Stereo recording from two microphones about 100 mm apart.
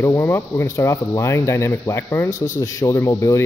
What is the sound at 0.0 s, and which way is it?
A man's voice, 25° left (ahead or behind).